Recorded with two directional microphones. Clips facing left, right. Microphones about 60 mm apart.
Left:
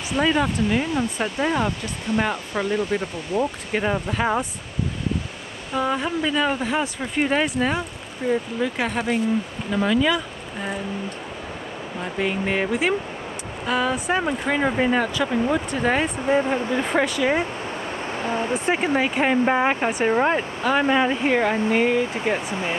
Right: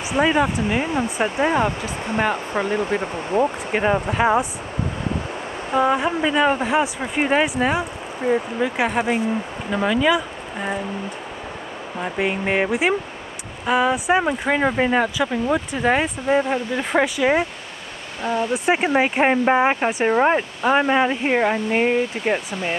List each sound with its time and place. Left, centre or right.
0.1 s speech: centre
5.8 s speech: centre
12.0 s speech: centre
18.2 s speech: left
18.5 s speech: centre
19.0 s speech: right